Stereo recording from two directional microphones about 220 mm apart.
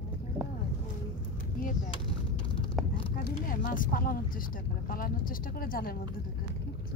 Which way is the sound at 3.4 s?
40° left (ahead or behind).